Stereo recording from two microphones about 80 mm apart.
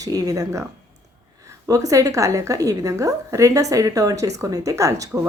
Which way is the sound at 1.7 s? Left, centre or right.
Right.